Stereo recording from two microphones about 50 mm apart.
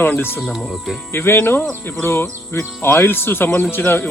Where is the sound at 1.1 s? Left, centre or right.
Left.